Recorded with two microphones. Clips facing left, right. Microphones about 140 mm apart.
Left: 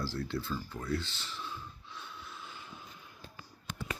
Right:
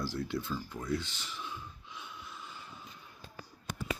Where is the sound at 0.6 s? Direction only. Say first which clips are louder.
Even; 15° right (ahead or behind); by 2.9 s centre (ahead or behind).